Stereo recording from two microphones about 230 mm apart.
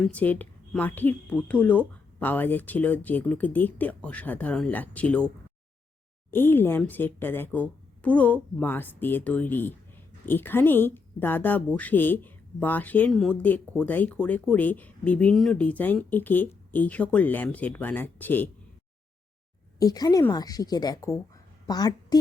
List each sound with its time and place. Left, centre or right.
0.0 s speech: centre
6.3 s speech: centre
19.8 s a woman's voice: centre